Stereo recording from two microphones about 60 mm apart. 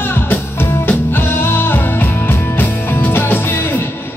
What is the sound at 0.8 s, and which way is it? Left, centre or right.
Music, left.